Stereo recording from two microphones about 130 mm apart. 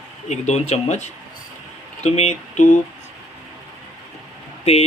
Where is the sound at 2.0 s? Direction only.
55° left (ahead or behind).